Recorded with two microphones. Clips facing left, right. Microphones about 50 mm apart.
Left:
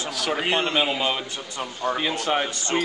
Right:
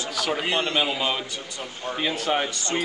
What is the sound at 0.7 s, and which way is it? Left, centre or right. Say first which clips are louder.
A man's voice: left 1 dB; centre.